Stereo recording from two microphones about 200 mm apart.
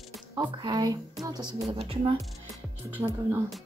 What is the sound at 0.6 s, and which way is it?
Speech, 20° right (ahead or behind).